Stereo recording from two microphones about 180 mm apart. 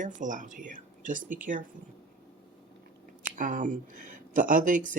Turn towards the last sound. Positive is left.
turn(degrees=-45)  # may be behind; listen again after turning